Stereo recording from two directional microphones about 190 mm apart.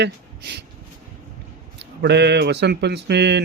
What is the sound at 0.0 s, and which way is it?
Speech, 65° right (ahead or behind).